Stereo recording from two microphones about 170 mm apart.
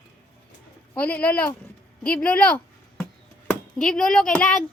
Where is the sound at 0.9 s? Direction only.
10° left (ahead or behind).